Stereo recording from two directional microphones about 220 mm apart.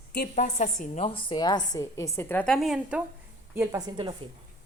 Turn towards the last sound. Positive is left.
turn(degrees=-20)  # may be behind; listen again after turning